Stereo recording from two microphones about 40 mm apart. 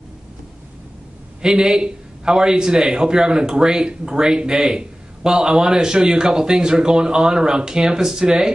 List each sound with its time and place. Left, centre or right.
1.4 s a man's voice: centre